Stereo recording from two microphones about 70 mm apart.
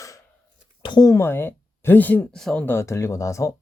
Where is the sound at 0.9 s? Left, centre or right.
Left.